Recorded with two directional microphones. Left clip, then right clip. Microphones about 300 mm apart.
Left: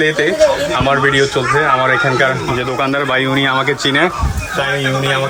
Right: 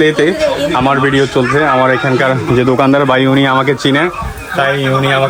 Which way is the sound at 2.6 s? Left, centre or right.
Centre.